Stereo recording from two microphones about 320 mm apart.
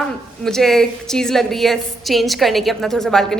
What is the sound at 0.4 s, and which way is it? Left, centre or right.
Speech, centre.